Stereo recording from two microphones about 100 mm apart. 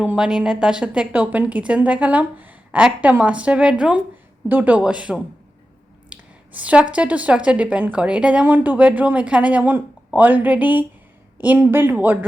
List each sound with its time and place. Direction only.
0.0 s a woman's voice: 10° right (ahead or behind)
6.1 s a sound: 15° right (ahead or behind)
6.9 s a woman's voice: 15° right (ahead or behind)